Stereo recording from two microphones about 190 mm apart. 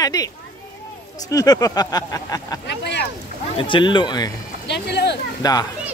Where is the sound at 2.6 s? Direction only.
65° left (ahead or behind).